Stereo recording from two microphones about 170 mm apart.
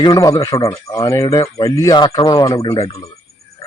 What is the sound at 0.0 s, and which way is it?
Speech, 20° left (ahead or behind).